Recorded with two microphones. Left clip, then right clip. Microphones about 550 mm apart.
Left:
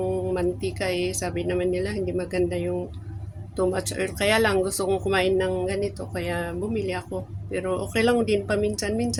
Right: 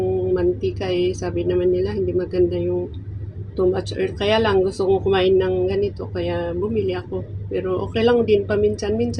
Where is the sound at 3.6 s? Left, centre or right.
Left.